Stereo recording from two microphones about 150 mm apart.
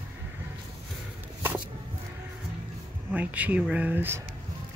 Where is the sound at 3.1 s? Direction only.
10° right (ahead or behind).